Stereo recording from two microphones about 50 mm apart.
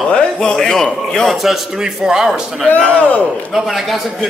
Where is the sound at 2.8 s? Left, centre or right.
Left.